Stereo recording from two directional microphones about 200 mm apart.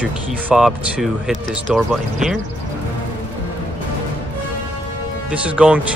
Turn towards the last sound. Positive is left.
turn(degrees=-5)  # may be behind; listen again after turning